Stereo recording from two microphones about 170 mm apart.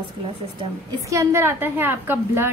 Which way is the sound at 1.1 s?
15° right (ahead or behind).